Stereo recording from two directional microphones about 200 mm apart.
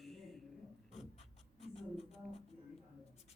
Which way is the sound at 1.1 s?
30° left (ahead or behind).